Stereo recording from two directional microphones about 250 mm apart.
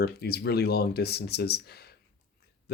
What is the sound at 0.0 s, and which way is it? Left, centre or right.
Speech, left.